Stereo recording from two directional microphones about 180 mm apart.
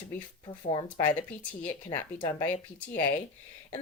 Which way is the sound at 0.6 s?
25° left (ahead or behind).